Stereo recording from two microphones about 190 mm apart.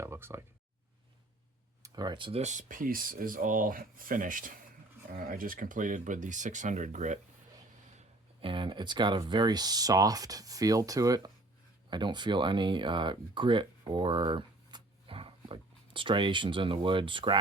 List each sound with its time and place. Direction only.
0.0 s a sound: 15° right (ahead or behind)
1.8 s speech: 20° right (ahead or behind); by 7.2 s 40° right (ahead or behind)
7.9 s speech: 30° right (ahead or behind)